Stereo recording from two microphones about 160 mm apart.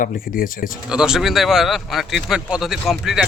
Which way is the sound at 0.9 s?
5° right (ahead or behind).